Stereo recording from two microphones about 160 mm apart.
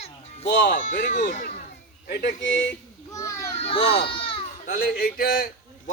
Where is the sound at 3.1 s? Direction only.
20° left (ahead or behind).